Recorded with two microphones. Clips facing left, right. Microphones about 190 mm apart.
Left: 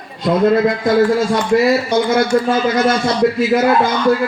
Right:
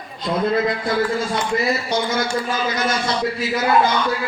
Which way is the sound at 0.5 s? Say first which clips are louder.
Left 7 dB; 45° left (ahead or behind).